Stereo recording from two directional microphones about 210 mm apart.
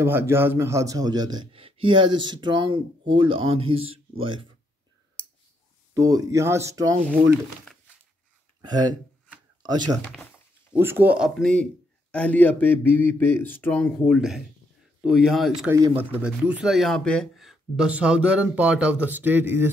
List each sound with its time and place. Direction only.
0.0 s a man's voice: 10° right (ahead or behind)
5.9 s speech: 15° right (ahead or behind)
8.5 s speech: 20° right (ahead or behind); by 13.8 s 10° left (ahead or behind)
14.0 s speech: centre (ahead or behind)